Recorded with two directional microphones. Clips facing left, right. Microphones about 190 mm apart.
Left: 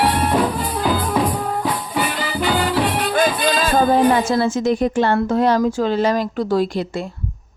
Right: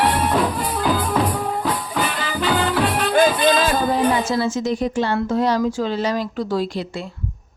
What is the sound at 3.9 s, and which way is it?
A woman's voice, 55° left (ahead or behind).